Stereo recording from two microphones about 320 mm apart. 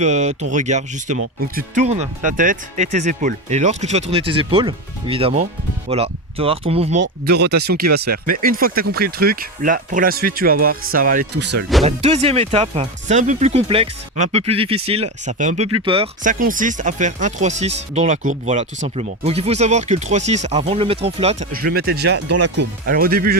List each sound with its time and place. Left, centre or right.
0.0 s speech: right
7.0 s speech: right
11.9 s speech: centre